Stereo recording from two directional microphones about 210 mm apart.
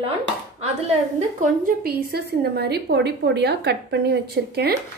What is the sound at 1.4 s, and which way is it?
A woman's voice, 45° right (ahead or behind).